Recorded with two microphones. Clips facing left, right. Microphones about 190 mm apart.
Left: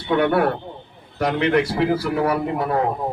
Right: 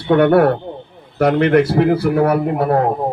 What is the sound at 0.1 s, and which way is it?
Speech, 55° right (ahead or behind).